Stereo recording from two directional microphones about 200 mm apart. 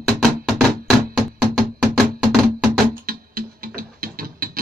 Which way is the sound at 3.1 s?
45° right (ahead or behind).